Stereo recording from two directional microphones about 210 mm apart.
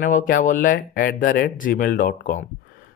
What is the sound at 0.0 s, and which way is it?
Speech, 40° left (ahead or behind).